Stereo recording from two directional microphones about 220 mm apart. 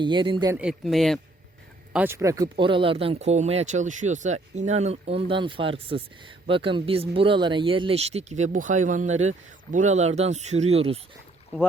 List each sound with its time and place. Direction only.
0.0 s speech: 20° right (ahead or behind)
0.5 s speech: 5° right (ahead or behind); by 11.0 s 25° right (ahead or behind)